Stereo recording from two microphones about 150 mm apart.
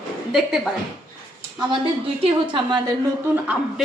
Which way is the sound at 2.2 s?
30° right (ahead or behind).